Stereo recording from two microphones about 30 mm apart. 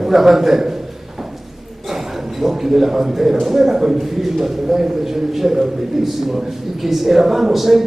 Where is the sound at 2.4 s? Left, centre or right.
Centre.